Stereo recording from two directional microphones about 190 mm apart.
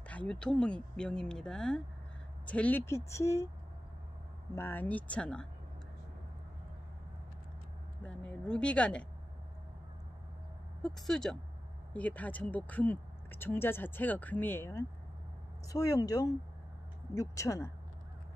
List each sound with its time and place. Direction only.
0.1 s speech: 5° left (ahead or behind)
4.6 s speech: 10° left (ahead or behind)
8.0 s speech: 5° left (ahead or behind)
10.8 s speech: centre (ahead or behind)